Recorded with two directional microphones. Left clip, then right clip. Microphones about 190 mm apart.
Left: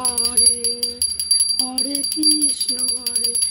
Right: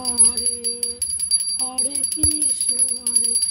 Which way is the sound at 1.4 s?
45° left (ahead or behind).